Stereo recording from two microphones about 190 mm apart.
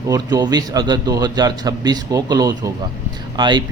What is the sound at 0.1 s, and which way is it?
Speech, 20° right (ahead or behind).